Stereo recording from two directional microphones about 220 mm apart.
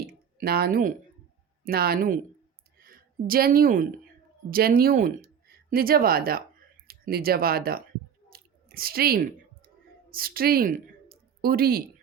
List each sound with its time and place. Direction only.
0.0 s a sound: 45° right (ahead or behind)
1.6 s a woman's voice: 45° right (ahead or behind)
8.3 s chewing: 40° right (ahead or behind)
10.1 s speech: 40° right (ahead or behind)